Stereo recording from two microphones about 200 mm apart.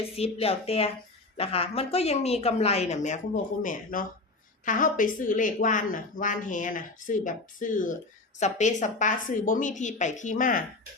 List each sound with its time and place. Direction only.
0.2 s speech: 30° left (ahead or behind)